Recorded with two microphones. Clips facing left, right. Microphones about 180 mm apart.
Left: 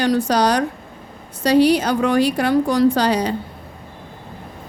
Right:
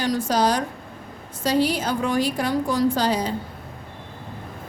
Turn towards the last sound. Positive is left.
turn(degrees=70)  # may be behind; listen again after turning